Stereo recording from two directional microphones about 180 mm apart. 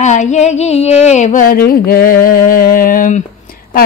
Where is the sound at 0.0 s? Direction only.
40° left (ahead or behind).